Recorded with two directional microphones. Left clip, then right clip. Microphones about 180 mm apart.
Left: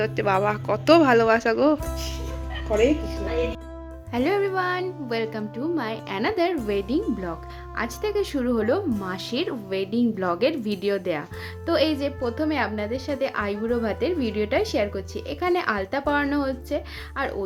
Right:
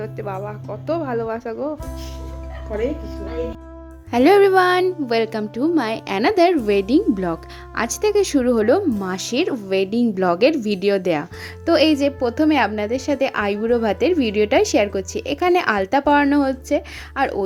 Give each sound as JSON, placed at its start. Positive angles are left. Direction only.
{"t": 0.0, "sound": "speech", "side_deg": 0}
{"t": 0.4, "sound": "speech", "side_deg": 10}
{"t": 4.1, "sound": "a woman's voice", "side_deg": -50}